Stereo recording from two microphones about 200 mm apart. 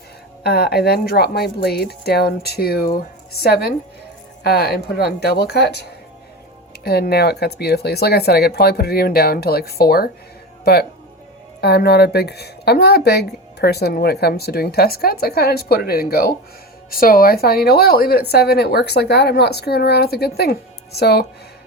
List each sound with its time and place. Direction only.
0.4 s speech: 55° left (ahead or behind)
6.8 s speech: 50° left (ahead or behind)